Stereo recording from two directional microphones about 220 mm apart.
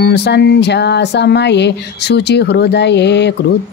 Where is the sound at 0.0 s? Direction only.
50° left (ahead or behind).